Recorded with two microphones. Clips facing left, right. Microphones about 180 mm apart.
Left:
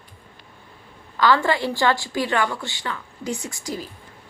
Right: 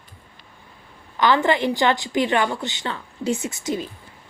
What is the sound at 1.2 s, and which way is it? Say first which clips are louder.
A woman's voice: right 1 dB; 20° right (ahead or behind).